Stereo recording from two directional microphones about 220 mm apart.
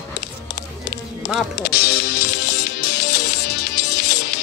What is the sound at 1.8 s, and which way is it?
Music, 45° left (ahead or behind).